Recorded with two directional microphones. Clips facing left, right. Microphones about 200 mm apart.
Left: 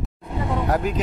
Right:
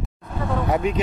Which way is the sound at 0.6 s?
Centre (ahead or behind).